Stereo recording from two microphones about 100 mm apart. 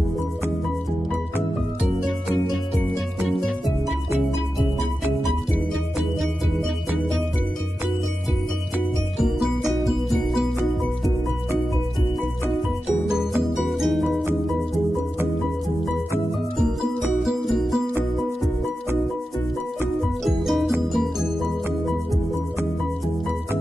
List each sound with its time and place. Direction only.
3.2 s music: centre (ahead or behind)
9.8 s music: centre (ahead or behind)
13.6 s music: centre (ahead or behind)
17.2 s music: centre (ahead or behind)
20.0 s music: centre (ahead or behind)